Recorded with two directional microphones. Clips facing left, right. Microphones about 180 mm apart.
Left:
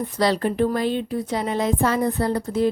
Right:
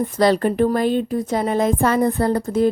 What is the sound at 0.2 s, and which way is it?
A woman's voice, 50° right (ahead or behind).